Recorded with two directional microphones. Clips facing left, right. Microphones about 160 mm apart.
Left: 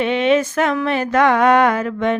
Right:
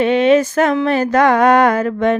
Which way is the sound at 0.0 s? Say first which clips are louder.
Right 4 dB; 40° right (ahead or behind).